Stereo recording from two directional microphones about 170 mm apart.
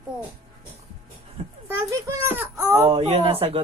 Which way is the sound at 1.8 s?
20° right (ahead or behind).